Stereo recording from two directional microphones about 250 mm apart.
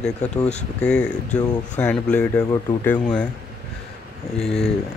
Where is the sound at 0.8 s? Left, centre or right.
Centre.